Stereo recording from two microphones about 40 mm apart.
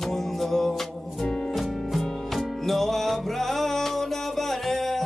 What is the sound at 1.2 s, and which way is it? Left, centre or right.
Music, left.